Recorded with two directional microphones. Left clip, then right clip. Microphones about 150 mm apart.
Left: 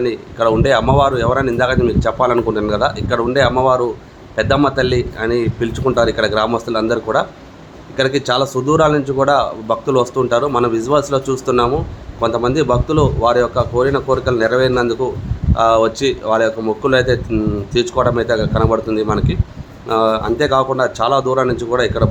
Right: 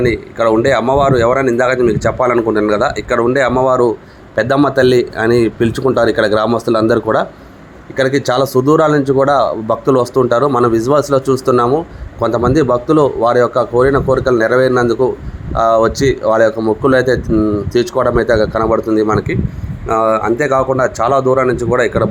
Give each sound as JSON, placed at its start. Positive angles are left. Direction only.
{"t": 0.8, "sound": "speech", "side_deg": 0}
{"t": 1.3, "sound": "speech", "side_deg": -25}